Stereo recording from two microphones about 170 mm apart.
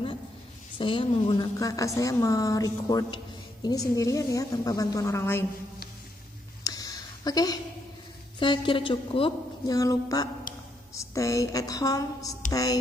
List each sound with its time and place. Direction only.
0.7 s a woman's voice: 30° left (ahead or behind)
6.6 s a sound: 20° left (ahead or behind)
8.4 s a woman's voice: 30° left (ahead or behind)
9.8 s a woman's voice: 20° left (ahead or behind)